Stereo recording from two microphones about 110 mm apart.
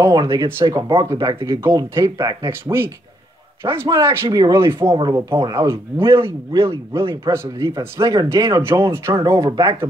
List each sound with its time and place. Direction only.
0.0 s a man's voice: 35° right (ahead or behind)
2.1 s speech: 40° right (ahead or behind)
2.6 s a man's voice: 20° right (ahead or behind)
4.9 s speech: 40° right (ahead or behind)
5.9 s a man's voice: 25° right (ahead or behind)